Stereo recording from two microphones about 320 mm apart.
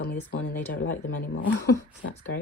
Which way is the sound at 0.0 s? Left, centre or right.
Left.